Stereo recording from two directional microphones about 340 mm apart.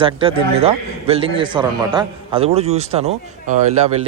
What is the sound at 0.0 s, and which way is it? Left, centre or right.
A man's voice, centre.